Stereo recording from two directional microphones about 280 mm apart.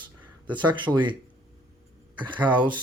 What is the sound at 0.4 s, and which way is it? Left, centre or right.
Speech, centre.